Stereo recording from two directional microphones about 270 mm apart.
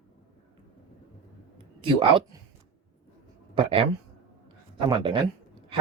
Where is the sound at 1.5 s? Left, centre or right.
Centre.